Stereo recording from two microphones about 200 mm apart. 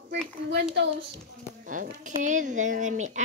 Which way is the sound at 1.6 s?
40° right (ahead or behind).